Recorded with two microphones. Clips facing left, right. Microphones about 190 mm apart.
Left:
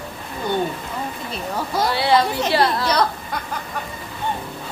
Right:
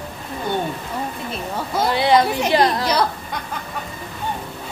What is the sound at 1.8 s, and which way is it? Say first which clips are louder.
A woman's voice: right 2 dB; 20° right (ahead or behind).